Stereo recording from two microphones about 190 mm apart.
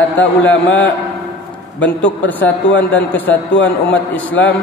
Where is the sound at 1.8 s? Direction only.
10° left (ahead or behind).